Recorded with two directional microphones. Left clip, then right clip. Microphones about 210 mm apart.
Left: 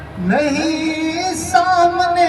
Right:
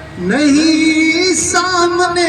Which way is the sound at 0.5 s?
15° right (ahead or behind).